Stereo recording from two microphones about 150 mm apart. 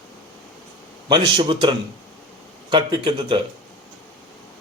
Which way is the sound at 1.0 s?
30° right (ahead or behind).